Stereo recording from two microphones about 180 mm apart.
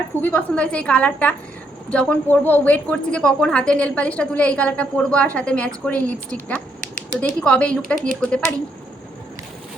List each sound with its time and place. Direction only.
0.2 s a woman's voice: 10° left (ahead or behind)
7.9 s speech: 45° right (ahead or behind)